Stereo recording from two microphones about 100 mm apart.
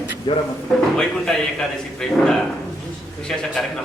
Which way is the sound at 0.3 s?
60° left (ahead or behind).